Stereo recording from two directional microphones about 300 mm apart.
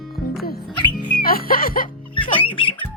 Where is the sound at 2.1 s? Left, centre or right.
Centre.